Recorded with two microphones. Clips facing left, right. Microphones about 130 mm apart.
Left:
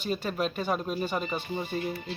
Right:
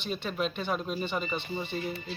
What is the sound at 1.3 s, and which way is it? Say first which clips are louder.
Speech: left 1 dB; 45° left (ahead or behind).